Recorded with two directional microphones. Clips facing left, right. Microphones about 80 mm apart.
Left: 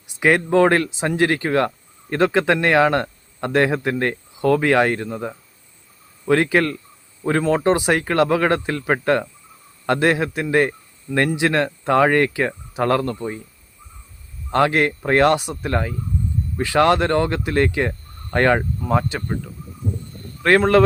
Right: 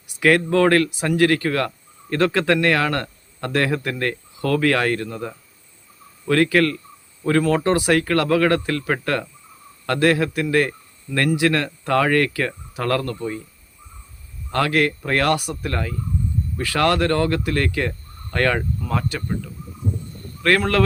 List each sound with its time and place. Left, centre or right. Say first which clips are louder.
0.2 s speech: left 1 dB; left
14.5 s speech: left 2 dB; left
20.4 s speech: left 4 dB; left